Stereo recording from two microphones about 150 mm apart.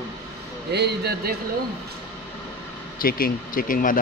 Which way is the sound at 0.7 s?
90° right.